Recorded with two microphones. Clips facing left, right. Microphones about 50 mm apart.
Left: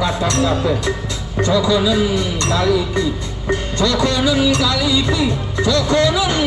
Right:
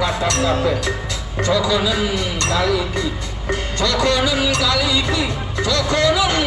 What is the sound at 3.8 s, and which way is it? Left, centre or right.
Music, right.